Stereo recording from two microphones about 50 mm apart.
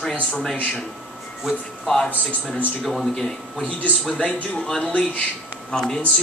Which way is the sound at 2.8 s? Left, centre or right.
Centre.